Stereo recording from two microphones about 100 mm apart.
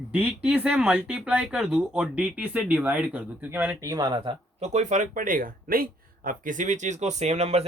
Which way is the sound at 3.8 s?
35° right (ahead or behind).